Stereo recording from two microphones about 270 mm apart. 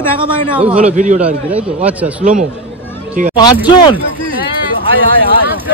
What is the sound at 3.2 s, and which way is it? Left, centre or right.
Speech, right.